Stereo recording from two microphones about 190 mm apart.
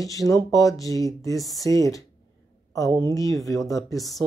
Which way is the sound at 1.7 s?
15° left (ahead or behind).